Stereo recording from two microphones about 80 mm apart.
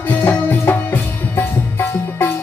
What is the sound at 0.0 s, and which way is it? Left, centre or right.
Music, left.